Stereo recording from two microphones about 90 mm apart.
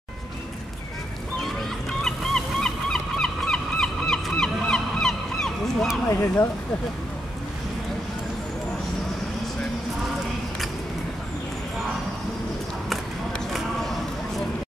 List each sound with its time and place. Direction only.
1.4 s goose: 5° left (ahead or behind)
6.0 s speech: 30° left (ahead or behind)
13.5 s a sound: centre (ahead or behind)